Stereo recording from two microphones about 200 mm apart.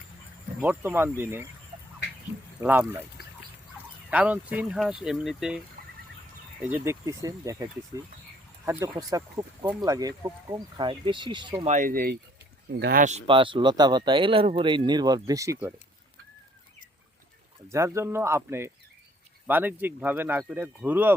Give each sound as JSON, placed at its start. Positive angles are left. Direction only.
{"t": 0.6, "sound": "speech", "side_deg": -10}
{"t": 2.6, "sound": "speech", "side_deg": -10}
{"t": 4.1, "sound": "speech", "side_deg": -5}
{"t": 11.7, "sound": "speech", "side_deg": -45}
{"t": 17.7, "sound": "speech", "side_deg": -15}